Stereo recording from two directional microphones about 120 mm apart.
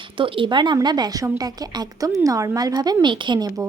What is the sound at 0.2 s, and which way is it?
A woman's voice, 45° right (ahead or behind).